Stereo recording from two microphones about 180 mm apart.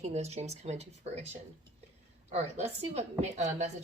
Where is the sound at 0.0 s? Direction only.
40° right (ahead or behind).